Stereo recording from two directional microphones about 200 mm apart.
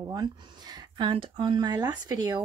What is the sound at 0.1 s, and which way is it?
Speech, 20° right (ahead or behind).